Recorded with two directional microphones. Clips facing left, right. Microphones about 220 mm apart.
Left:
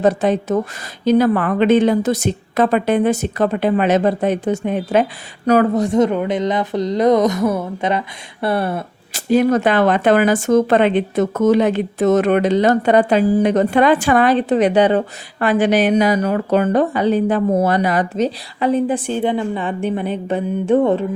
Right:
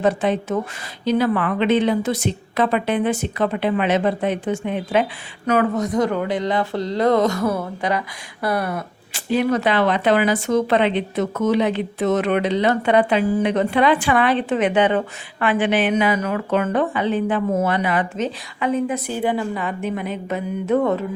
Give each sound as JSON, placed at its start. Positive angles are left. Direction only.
{"t": 0.0, "sound": "a woman's voice", "side_deg": 40}
{"t": 9.1, "sound": "a woman's voice", "side_deg": 45}